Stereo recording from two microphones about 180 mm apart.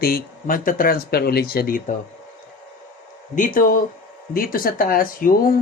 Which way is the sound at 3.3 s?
45° left (ahead or behind).